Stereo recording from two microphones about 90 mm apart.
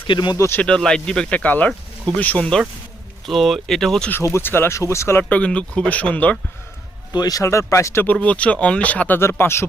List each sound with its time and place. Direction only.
0.1 s speech: 55° left (ahead or behind)
0.3 s speech: 30° left (ahead or behind)
0.6 s speech: 10° left (ahead or behind)
3.2 s speech: centre (ahead or behind)
4.1 s speech: 30° left (ahead or behind)
5.3 s speech: 15° left (ahead or behind)
7.1 s speech: 45° left (ahead or behind)
8.0 s speech: 15° left (ahead or behind)